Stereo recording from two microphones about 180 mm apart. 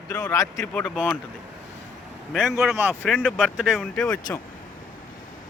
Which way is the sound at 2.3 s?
Centre (ahead or behind).